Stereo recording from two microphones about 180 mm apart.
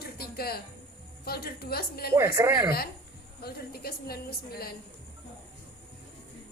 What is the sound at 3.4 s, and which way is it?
A woman's voice, 60° left (ahead or behind).